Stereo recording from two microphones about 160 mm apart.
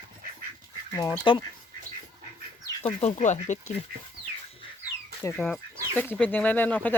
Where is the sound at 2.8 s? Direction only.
35° left (ahead or behind).